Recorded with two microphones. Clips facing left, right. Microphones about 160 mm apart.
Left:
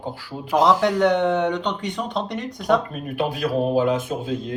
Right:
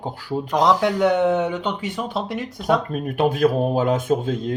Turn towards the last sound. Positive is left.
turn(degrees=-45)  # may be behind; listen again after turning